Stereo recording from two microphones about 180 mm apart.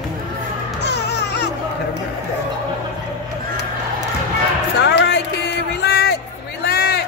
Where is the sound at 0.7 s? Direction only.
70° left (ahead or behind).